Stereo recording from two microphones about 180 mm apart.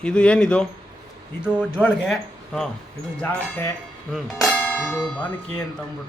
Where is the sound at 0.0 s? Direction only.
5° left (ahead or behind).